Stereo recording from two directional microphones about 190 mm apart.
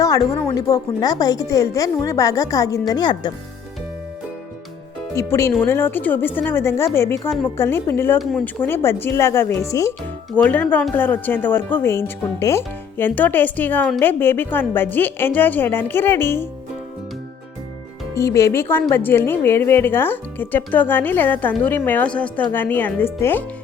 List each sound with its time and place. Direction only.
0.4 s speech: 20° left (ahead or behind)
5.1 s a woman's voice: 15° left (ahead or behind)
8.2 s speech: centre (ahead or behind)
8.6 s a woman's voice: 10° left (ahead or behind)
18.1 s a woman's voice: 15° left (ahead or behind)